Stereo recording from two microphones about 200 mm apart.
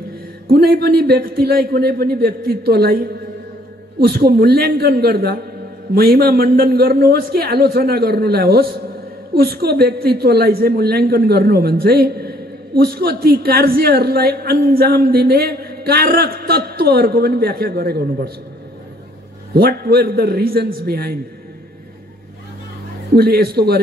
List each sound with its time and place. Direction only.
0.5 s a woman's voice: 50° right (ahead or behind)
19.5 s a woman's voice: 50° right (ahead or behind)
23.1 s a woman's voice: 50° right (ahead or behind)